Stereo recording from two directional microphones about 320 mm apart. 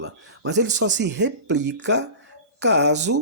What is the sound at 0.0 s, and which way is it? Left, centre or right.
Speech, right.